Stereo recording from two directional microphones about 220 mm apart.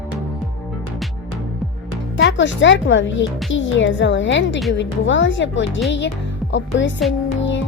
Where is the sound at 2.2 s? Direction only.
55° left (ahead or behind).